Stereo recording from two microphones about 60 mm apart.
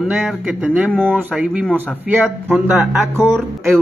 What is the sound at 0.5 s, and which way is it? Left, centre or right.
Speech, right.